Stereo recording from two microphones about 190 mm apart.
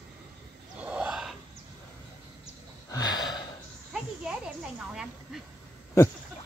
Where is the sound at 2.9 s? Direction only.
20° left (ahead or behind).